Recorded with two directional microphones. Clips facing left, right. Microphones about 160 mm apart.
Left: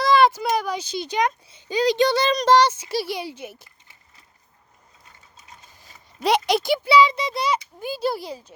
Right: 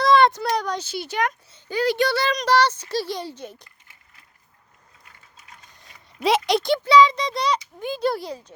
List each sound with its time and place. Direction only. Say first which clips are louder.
0.0 s a sound: even; centre (ahead or behind)
0.9 s speech: left 2 dB; 15° left (ahead or behind)
5.8 s a child's voice: right 1 dB; centre (ahead or behind)